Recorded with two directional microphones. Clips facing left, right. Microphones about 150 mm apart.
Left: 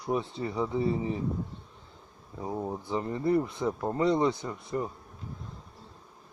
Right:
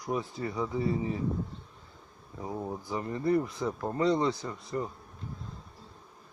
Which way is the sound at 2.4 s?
20° left (ahead or behind).